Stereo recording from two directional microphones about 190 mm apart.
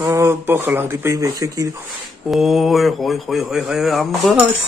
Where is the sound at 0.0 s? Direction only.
15° right (ahead or behind).